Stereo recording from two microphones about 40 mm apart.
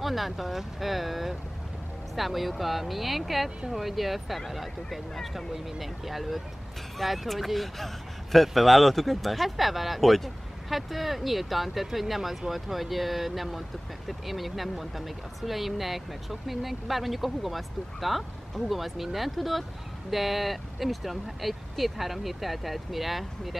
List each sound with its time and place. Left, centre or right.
0.0 s speech: centre